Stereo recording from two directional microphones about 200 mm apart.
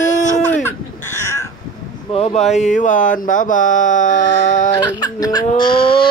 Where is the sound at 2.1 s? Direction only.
30° left (ahead or behind).